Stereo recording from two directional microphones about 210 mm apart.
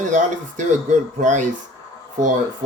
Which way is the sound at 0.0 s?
35° right (ahead or behind).